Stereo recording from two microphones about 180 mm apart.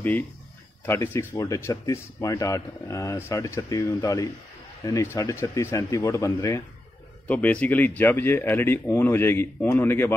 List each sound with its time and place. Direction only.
0.8 s speech: 15° left (ahead or behind)